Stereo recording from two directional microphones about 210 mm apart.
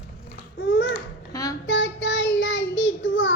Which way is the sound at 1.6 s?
60° left (ahead or behind).